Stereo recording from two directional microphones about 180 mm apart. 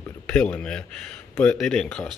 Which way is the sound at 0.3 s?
5° left (ahead or behind).